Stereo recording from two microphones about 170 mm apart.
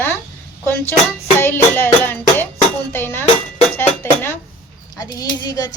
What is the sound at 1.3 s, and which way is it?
A woman's voice, 10° left (ahead or behind).